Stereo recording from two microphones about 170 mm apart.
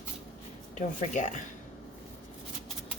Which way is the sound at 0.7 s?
45° left (ahead or behind).